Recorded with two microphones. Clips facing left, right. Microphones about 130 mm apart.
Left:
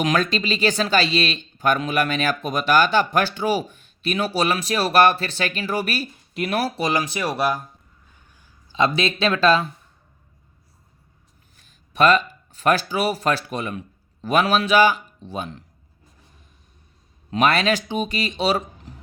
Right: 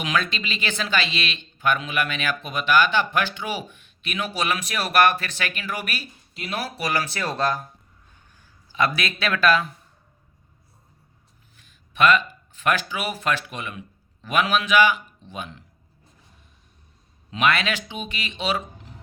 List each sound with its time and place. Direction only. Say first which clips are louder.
0.0 s speech: left 5 dB; 40° left (ahead or behind)
6.3 s speech: left 7 dB; 55° left (ahead or behind)
6.6 s speech: left 3 dB; 30° left (ahead or behind); by 7.6 s 10° left (ahead or behind)
8.7 s speech: left 4 dB; 25° left (ahead or behind)
11.5 s speech: left 6 dB; 40° left (ahead or behind)
17.3 s speech: left 4 dB; 35° left (ahead or behind)